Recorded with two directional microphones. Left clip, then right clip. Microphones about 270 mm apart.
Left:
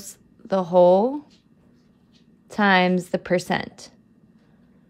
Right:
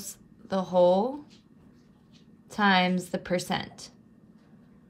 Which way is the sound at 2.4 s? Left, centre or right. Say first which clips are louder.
Left 5 dB; left.